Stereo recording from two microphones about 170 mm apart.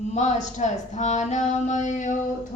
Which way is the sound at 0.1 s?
45° left (ahead or behind).